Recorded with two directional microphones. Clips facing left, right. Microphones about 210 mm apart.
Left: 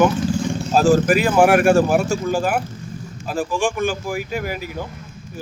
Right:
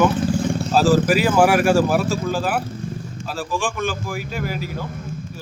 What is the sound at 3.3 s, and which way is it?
Speech, 15° left (ahead or behind).